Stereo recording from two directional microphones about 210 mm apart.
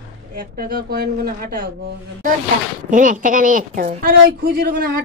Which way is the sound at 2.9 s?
40° right (ahead or behind).